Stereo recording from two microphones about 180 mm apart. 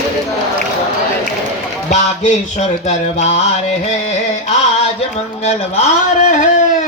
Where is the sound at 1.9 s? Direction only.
40° left (ahead or behind).